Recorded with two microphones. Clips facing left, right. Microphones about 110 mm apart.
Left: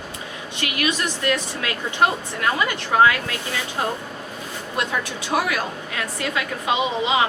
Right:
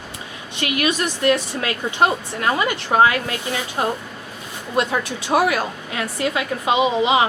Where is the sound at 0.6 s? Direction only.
30° right (ahead or behind).